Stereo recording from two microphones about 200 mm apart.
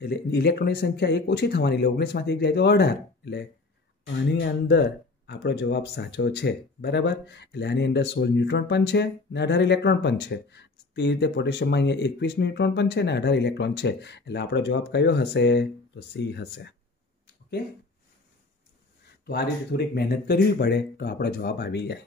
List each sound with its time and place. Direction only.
0.0 s speech: 55° left (ahead or behind)
19.2 s speech: 55° left (ahead or behind)